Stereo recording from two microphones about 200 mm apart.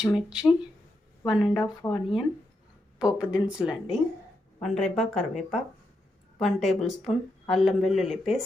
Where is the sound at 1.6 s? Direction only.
20° left (ahead or behind).